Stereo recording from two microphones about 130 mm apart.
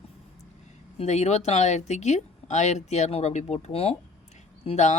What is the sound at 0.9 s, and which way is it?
Speech, 60° left (ahead or behind).